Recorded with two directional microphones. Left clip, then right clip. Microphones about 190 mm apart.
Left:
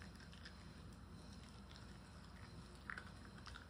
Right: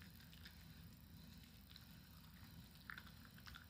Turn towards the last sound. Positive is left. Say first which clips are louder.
# left 4 dB
turn(degrees=10)  # may be behind; listen again after turning